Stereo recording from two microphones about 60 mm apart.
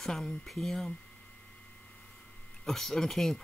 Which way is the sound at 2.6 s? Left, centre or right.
Centre.